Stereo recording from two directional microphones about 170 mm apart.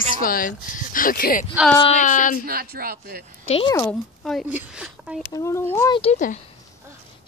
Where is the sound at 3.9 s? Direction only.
5° left (ahead or behind).